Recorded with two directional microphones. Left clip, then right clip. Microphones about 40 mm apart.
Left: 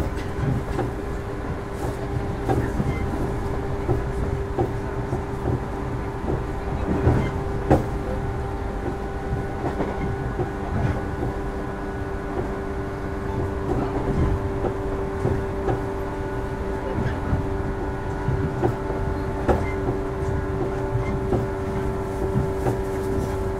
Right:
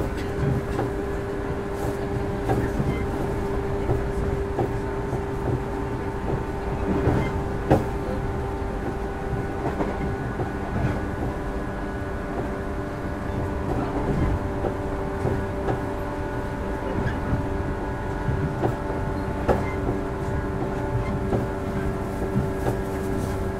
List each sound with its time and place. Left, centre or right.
7.0 s vehicle: centre